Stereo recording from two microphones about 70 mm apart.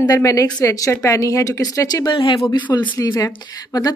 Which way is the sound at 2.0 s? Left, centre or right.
Left.